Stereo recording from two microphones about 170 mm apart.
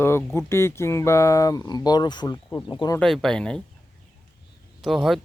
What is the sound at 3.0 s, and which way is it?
Speech, centre (ahead or behind).